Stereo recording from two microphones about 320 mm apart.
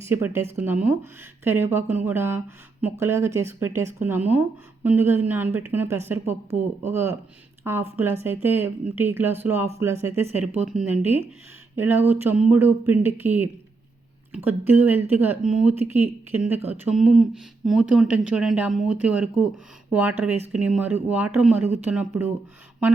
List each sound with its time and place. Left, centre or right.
0.0 s speech: centre